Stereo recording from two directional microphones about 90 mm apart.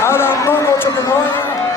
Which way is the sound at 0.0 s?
25° left (ahead or behind).